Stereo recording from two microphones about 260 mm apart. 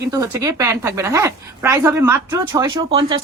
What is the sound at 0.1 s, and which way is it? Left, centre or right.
A woman's voice, centre.